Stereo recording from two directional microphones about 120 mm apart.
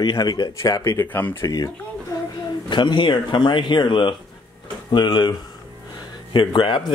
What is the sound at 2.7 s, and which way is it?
Speech, 40° left (ahead or behind).